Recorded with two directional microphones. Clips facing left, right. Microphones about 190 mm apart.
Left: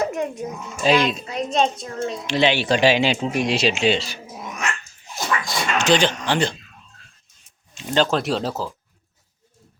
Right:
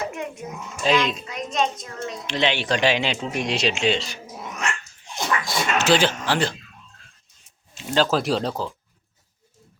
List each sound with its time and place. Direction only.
0.0 s a sound: 40° left (ahead or behind)
0.9 s a woman's voice: 35° left (ahead or behind)
2.2 s speech: 10° left (ahead or behind)
7.8 s speech: 5° right (ahead or behind)